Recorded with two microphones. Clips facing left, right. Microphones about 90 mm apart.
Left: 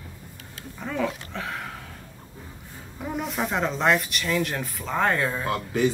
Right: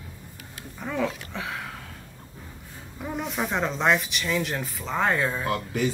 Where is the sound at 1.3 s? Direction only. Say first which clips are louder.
Left 1 dB; centre (ahead or behind).